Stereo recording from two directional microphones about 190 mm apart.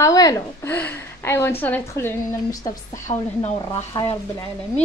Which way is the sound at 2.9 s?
40° left (ahead or behind).